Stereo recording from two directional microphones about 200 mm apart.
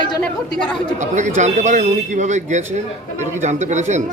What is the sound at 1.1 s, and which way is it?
A man's voice, 35° right (ahead or behind).